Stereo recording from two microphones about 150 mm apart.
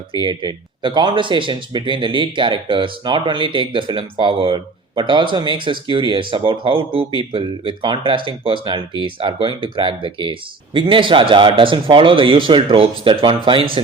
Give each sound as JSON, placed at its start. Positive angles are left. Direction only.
{"t": 0.2, "sound": "speech", "side_deg": -30}